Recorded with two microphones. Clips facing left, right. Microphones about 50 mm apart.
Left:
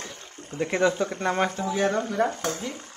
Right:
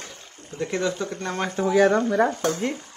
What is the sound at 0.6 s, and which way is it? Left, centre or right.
Speech, left.